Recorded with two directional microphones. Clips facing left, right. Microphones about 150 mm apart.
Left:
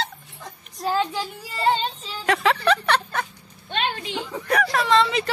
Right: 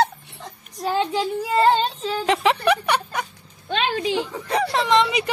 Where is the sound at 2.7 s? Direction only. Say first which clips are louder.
Right 1 dB; 10° right (ahead or behind).